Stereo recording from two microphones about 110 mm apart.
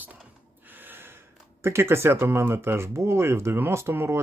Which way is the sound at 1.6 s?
25° right (ahead or behind).